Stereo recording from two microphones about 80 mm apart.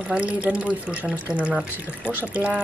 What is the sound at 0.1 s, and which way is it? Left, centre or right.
Speech, centre.